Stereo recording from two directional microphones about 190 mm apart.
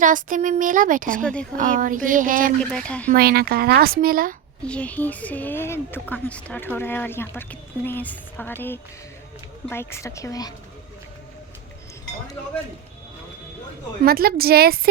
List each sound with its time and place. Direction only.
0.0 s speech: 45° right (ahead or behind)
1.2 s speech: 5° left (ahead or behind)
1.5 s speech: 45° right (ahead or behind)
2.6 s speech: 5° left (ahead or behind)
3.1 s speech: 50° right (ahead or behind)
4.6 s a woman's voice: 5° left (ahead or behind)
14.0 s speech: 55° right (ahead or behind)